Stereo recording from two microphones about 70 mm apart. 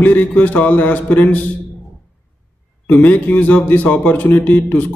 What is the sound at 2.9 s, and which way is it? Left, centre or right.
Speech, left.